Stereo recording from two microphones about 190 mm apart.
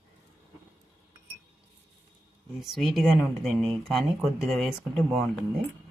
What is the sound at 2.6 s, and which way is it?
Speech, centre (ahead or behind).